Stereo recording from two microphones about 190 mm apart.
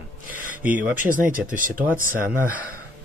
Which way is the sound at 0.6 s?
10° right (ahead or behind).